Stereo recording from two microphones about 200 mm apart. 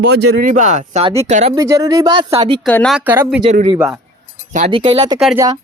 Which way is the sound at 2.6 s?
5° left (ahead or behind).